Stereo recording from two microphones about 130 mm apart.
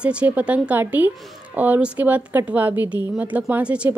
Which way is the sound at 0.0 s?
10° right (ahead or behind).